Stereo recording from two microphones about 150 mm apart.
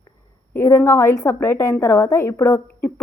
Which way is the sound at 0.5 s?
15° left (ahead or behind).